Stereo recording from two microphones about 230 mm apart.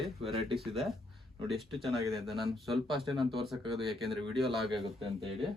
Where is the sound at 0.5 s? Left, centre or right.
Centre.